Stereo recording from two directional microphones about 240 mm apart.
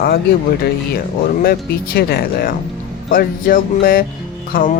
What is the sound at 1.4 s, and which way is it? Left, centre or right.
Speech, left.